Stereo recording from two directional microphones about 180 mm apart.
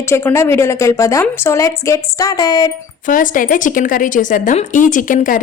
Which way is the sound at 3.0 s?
50° left (ahead or behind).